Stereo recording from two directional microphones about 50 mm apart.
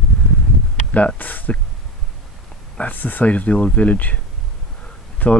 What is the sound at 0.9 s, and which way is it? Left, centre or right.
Speech, left.